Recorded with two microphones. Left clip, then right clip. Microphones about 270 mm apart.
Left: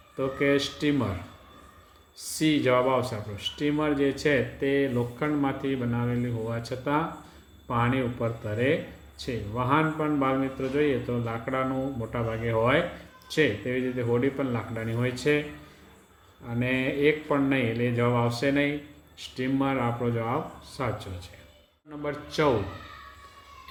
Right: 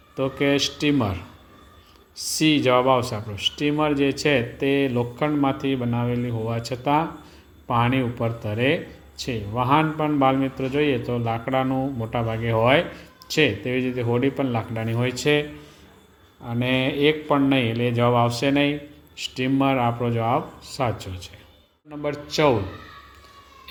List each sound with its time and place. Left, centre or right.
0.2 s a man's voice: right
2.4 s a man's voice: right
16.5 s a man's voice: right